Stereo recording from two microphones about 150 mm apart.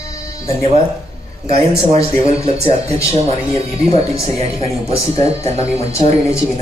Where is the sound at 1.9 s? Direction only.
45° right (ahead or behind).